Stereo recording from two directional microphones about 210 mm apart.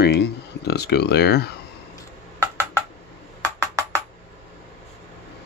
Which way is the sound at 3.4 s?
15° right (ahead or behind).